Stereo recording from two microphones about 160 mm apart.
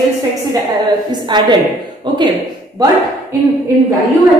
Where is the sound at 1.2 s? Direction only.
30° right (ahead or behind).